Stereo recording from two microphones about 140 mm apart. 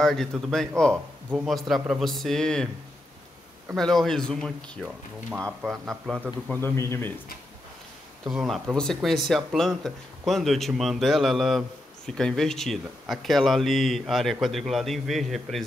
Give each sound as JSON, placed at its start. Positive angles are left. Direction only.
{"t": 0.0, "sound": "speech", "side_deg": 5}
{"t": 3.7, "sound": "speech", "side_deg": 0}
{"t": 6.5, "sound": "a man's voice", "side_deg": 15}
{"t": 8.3, "sound": "speech", "side_deg": -5}